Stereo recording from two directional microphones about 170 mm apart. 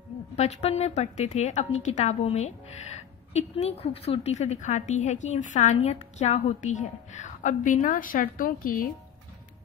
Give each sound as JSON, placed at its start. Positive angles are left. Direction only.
{"t": 0.4, "sound": "a woman's voice", "side_deg": 40}